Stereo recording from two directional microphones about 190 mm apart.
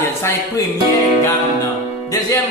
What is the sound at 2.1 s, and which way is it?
Speech, 15° left (ahead or behind).